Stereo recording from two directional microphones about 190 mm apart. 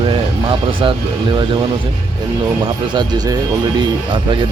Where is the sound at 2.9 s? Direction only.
25° right (ahead or behind).